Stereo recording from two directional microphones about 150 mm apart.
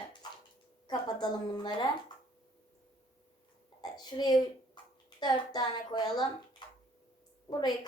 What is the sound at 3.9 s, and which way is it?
A woman's voice, 25° left (ahead or behind).